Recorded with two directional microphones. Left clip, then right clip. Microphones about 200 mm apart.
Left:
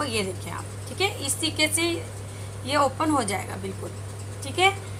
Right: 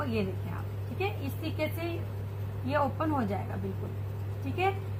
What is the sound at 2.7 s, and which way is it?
Speech, 45° left (ahead or behind).